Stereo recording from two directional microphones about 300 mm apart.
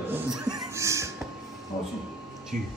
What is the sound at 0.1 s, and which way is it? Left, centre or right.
Music, centre.